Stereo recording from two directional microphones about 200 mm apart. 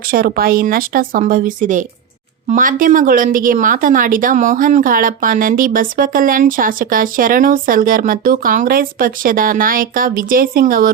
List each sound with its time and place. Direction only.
0.1 s a woman's voice: 50° right (ahead or behind)